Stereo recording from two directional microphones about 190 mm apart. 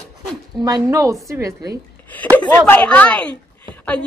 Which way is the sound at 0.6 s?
20° right (ahead or behind).